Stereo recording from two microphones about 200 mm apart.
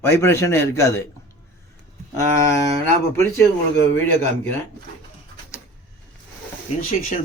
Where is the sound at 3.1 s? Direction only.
10° left (ahead or behind).